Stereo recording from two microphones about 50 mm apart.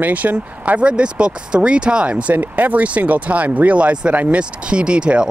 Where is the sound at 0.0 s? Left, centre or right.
Right.